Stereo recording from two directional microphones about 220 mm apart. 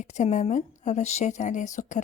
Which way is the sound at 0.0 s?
30° left (ahead or behind).